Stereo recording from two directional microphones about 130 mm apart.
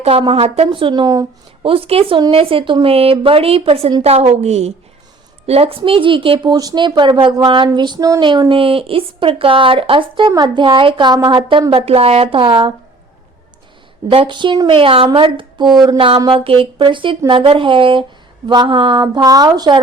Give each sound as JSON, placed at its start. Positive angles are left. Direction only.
{"t": 0.0, "sound": "a woman's voice", "side_deg": -50}
{"t": 1.0, "sound": "speech", "side_deg": -30}
{"t": 1.6, "sound": "a woman's voice", "side_deg": -45}
{"t": 8.2, "sound": "a woman's voice", "side_deg": -35}
{"t": 14.1, "sound": "a woman's voice", "side_deg": -40}
{"t": 19.0, "sound": "a woman's voice", "side_deg": -30}